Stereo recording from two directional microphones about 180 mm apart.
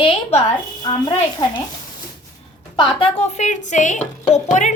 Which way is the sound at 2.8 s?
30° left (ahead or behind).